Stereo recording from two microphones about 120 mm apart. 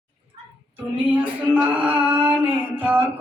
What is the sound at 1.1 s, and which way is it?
Music, 10° right (ahead or behind).